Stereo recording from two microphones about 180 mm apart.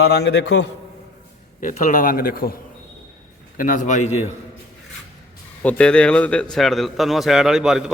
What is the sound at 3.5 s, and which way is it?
Speech, 45° left (ahead or behind).